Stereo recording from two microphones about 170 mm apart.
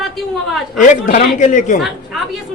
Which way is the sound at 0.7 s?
50° left (ahead or behind).